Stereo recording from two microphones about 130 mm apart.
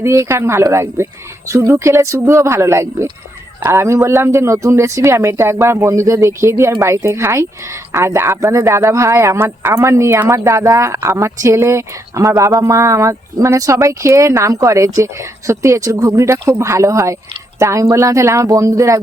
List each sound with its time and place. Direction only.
0.0 s speech: 20° right (ahead or behind)